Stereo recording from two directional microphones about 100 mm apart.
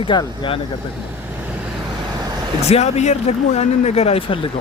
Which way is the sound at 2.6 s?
90° left.